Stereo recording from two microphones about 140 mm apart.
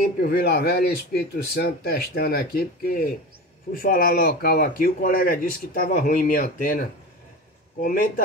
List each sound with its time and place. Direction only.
0.2 s speech: 90° left